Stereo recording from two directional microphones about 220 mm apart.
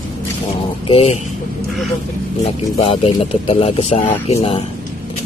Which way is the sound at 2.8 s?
25° left (ahead or behind).